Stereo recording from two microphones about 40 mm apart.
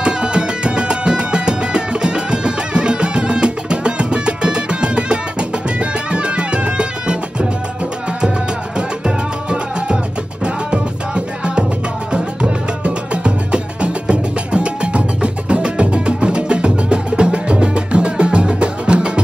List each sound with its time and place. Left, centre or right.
0.0 s music: right
8.7 s music: right